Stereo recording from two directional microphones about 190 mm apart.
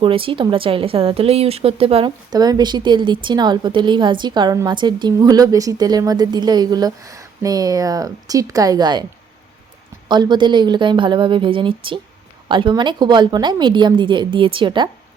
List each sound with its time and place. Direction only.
0.0 s a woman's voice: 30° right (ahead or behind)
10.1 s a woman's voice: 25° right (ahead or behind)